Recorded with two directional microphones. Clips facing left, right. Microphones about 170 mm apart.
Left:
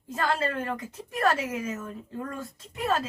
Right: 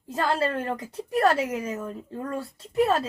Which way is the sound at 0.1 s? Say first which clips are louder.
Right 3 dB; 35° right (ahead or behind).